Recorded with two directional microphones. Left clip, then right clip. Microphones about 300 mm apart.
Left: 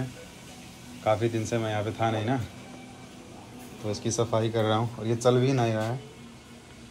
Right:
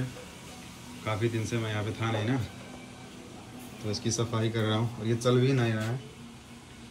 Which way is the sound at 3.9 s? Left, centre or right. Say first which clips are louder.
Left 4 dB; centre.